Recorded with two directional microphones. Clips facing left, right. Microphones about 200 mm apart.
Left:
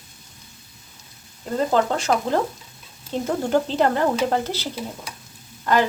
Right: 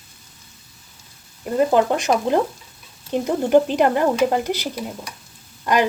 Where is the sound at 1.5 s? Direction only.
15° right (ahead or behind).